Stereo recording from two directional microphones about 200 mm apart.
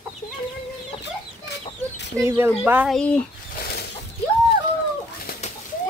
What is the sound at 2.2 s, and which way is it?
Speech, 15° right (ahead or behind).